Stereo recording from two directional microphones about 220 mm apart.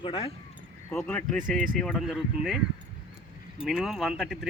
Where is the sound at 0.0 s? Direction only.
25° left (ahead or behind).